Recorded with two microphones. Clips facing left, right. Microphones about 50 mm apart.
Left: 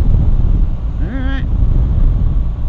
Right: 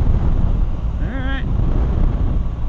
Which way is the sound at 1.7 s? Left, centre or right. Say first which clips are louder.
Left 1 dB; right.